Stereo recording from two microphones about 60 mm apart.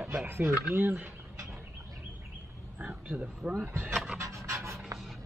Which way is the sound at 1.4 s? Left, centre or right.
Right.